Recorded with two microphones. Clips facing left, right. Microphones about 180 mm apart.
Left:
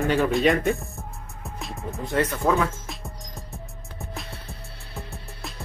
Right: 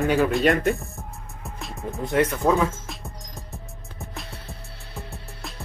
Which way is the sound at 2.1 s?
15° right (ahead or behind).